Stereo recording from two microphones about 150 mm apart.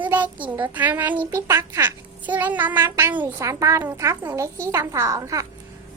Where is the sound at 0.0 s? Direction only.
10° right (ahead or behind).